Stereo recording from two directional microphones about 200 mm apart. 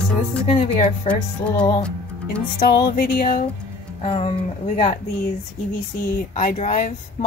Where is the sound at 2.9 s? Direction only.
50° left (ahead or behind).